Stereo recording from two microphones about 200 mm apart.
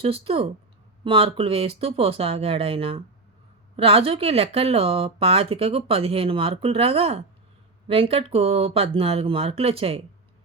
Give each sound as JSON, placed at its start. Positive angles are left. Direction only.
{"t": 0.0, "sound": "speech", "side_deg": -30}